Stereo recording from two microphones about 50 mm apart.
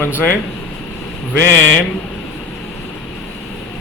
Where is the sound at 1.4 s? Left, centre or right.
Left.